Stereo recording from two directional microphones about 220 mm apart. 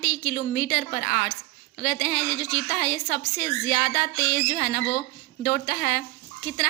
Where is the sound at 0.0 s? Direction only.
50° left (ahead or behind).